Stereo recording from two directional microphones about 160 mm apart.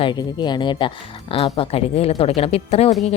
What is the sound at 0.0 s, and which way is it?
A woman's voice, 25° left (ahead or behind).